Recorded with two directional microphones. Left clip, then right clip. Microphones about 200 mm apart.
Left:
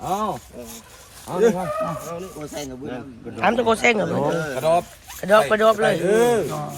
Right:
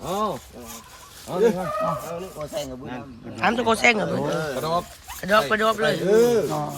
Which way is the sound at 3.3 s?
5° right (ahead or behind).